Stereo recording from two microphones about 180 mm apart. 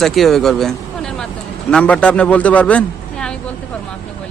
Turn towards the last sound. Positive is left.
turn(degrees=5)  # may be behind; listen again after turning